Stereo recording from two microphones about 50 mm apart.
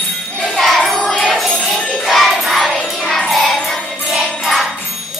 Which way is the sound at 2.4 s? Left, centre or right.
Centre.